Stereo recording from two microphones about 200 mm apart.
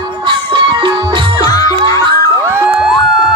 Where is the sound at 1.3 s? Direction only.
15° left (ahead or behind).